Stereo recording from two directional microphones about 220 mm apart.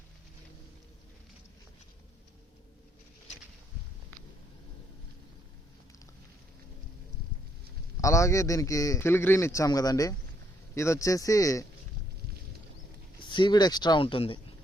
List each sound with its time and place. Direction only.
8.0 s a man's voice: 15° left (ahead or behind)
13.1 s speech: 20° left (ahead or behind)